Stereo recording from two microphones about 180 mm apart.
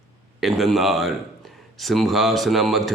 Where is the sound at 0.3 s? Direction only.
Centre (ahead or behind).